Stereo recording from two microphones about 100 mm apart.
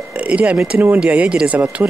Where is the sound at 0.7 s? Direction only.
25° right (ahead or behind).